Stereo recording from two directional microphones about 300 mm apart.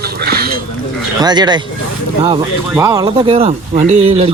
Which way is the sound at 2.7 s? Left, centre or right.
Centre.